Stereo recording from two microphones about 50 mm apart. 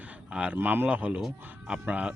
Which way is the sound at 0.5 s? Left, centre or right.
Right.